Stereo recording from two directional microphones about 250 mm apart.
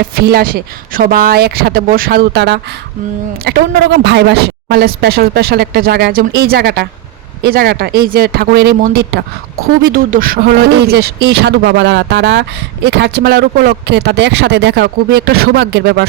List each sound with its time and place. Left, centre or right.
0.0 s speech: right